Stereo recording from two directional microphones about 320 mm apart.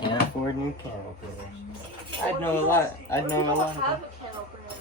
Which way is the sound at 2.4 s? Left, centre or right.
Centre.